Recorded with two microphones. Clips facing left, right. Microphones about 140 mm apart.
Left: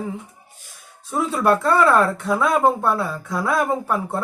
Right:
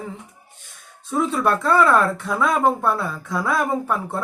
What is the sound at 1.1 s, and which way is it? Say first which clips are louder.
Speech: left 1 dB; 5° left (ahead or behind).